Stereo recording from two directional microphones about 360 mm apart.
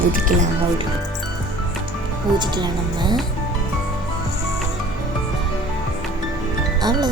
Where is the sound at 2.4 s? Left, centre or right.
Centre.